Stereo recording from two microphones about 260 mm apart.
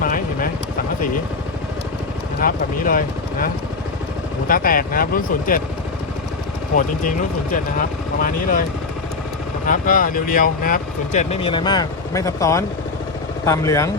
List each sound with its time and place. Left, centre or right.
0.0 s vehicle: left
2.4 s speech: left
4.4 s speech: left
8.2 s speech: left
9.6 s speech: left; by 13.9 s centre